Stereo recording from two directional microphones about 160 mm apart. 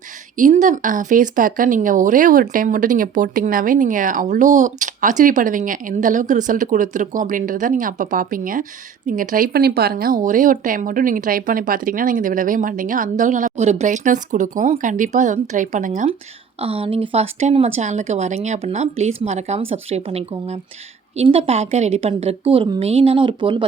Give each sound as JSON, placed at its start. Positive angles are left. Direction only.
{"t": 0.3, "sound": "speech", "side_deg": -50}
{"t": 16.6, "sound": "speech", "side_deg": -40}